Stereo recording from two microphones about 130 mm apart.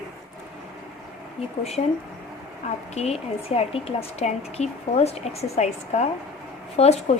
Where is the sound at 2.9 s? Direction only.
55° left (ahead or behind).